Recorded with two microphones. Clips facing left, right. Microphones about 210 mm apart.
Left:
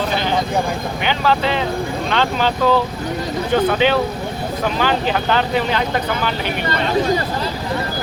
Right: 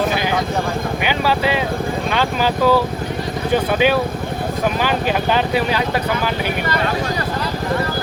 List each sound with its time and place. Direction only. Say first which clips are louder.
1.0 s speech: left 1 dB; 10° right (ahead or behind)
4.8 s speech: even; 10° right (ahead or behind)